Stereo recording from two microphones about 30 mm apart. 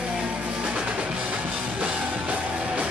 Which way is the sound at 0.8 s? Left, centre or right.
Right.